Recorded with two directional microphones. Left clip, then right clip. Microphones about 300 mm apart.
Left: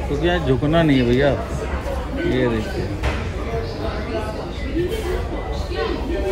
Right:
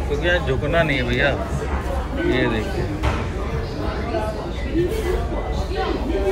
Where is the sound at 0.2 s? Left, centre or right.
Centre.